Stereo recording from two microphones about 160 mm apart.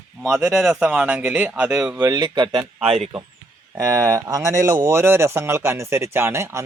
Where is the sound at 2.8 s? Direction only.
40° right (ahead or behind).